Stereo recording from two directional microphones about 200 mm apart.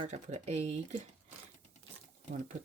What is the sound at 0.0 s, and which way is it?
Speech, 35° right (ahead or behind).